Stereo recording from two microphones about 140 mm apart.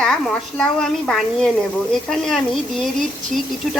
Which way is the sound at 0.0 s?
5° left (ahead or behind).